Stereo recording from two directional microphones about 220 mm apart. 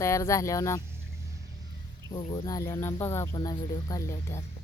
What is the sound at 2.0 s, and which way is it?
Speech, 15° left (ahead or behind).